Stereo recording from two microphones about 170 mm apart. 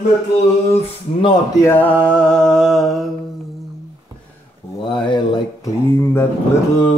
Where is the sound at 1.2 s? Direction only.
25° left (ahead or behind).